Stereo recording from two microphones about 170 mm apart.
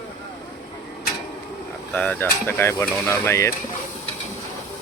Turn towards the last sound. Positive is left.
turn(degrees=15)  # may be behind; listen again after turning